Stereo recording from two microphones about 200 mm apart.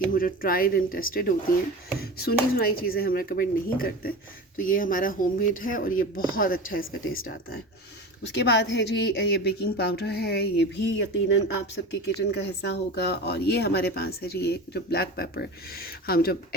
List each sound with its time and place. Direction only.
0.1 s speech: 45° left (ahead or behind)
7.0 s speech: 90° left
8.2 s speech: 60° left (ahead or behind)